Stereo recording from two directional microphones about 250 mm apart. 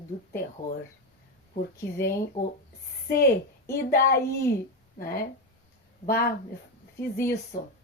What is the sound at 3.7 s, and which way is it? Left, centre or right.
Speech, left.